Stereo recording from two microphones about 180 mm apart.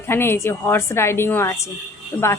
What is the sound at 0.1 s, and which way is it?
A woman's voice, 15° left (ahead or behind).